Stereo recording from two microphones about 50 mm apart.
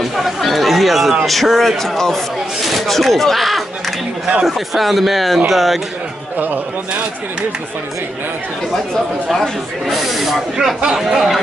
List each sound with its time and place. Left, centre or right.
0.0 s chatter: centre
1.2 s speech: centre
9.3 s speech: centre